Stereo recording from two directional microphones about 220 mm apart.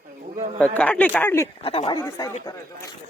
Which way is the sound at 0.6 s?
5° left (ahead or behind).